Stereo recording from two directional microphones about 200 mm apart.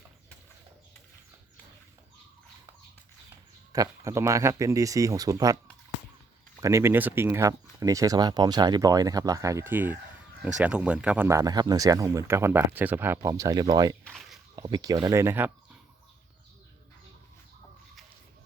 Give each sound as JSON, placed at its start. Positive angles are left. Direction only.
{"t": 3.7, "sound": "speech", "side_deg": -15}
{"t": 6.6, "sound": "speech", "side_deg": -15}
{"t": 14.0, "sound": "a sound", "side_deg": 0}
{"t": 14.5, "sound": "speech", "side_deg": -20}